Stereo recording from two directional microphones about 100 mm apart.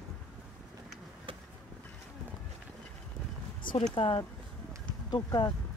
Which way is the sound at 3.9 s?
65° left (ahead or behind).